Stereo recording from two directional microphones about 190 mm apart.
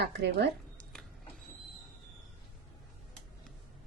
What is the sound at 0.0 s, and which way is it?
Speech, 60° right (ahead or behind).